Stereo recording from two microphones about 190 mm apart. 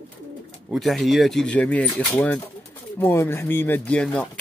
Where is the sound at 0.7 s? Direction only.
Centre (ahead or behind).